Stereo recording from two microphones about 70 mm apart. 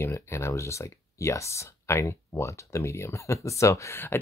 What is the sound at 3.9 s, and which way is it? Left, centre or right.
Speech, left.